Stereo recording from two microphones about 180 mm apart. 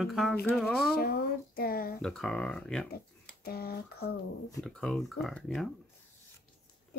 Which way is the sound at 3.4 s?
60° left (ahead or behind).